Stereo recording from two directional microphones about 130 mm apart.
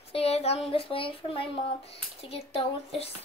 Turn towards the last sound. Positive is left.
turn(degrees=50)  # may be behind; listen again after turning